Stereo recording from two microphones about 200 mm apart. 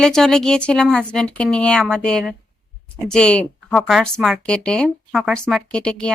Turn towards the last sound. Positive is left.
turn(degrees=5)  # may be behind; listen again after turning